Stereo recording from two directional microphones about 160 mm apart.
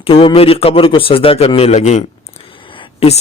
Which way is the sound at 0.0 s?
35° left (ahead or behind).